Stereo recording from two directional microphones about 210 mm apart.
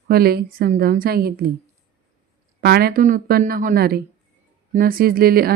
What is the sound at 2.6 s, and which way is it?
Speech, 50° right (ahead or behind).